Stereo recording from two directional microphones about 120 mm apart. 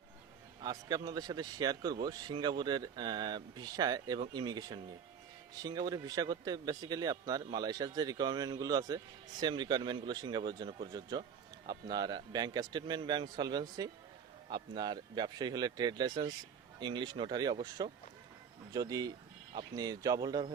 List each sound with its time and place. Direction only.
0.6 s speech: 35° right (ahead or behind)